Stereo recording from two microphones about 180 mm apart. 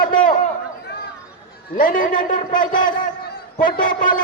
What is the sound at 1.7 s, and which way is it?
Speech, 50° left (ahead or behind).